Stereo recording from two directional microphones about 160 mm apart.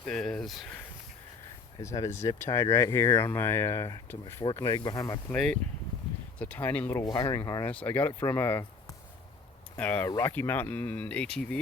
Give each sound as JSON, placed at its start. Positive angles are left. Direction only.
{"t": 0.0, "sound": "speech", "side_deg": 5}
{"t": 1.8, "sound": "speech", "side_deg": 20}
{"t": 5.3, "sound": "speech", "side_deg": 5}
{"t": 7.0, "sound": "speech", "side_deg": 25}
{"t": 9.7, "sound": "speech", "side_deg": 10}